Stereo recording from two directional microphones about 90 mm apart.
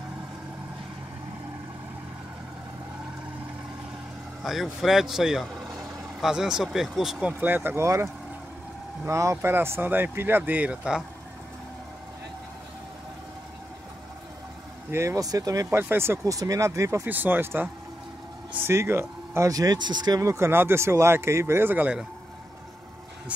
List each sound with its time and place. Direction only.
4.5 s speech: centre (ahead or behind)
7.3 s speech: 20° right (ahead or behind)
14.9 s speech: 35° right (ahead or behind)
15.7 s speech: 25° right (ahead or behind)
16.3 s speech: 35° right (ahead or behind)
17.0 s speech: 20° right (ahead or behind)
19.5 s speech: 45° right (ahead or behind)
20.2 s speech: 30° right (ahead or behind)